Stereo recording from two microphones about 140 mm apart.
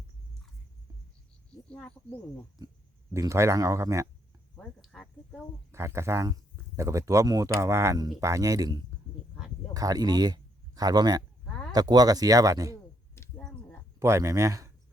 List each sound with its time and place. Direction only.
1.7 s speech: 5° left (ahead or behind)
3.1 s speech: 20° right (ahead or behind)
4.5 s speech: 5° left (ahead or behind)
5.7 s speech: 20° right (ahead or behind)
13.4 s a sound: 5° left (ahead or behind)
14.0 s speech: 20° right (ahead or behind)